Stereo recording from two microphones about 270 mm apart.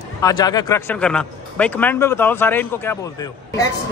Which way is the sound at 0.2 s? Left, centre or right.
Centre.